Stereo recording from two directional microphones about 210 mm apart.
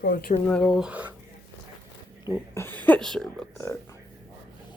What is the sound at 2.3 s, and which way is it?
Speech, 10° left (ahead or behind).